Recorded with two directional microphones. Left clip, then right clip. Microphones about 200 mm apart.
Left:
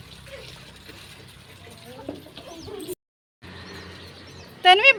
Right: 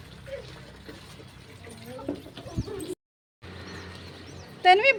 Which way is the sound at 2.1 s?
60° right (ahead or behind).